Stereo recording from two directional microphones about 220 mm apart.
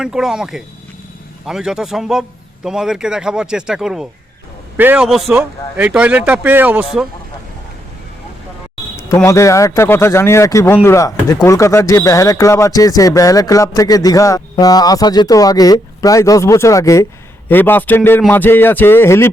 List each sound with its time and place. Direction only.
0.0 s speech: centre (ahead or behind)
9.0 s speech: 15° left (ahead or behind)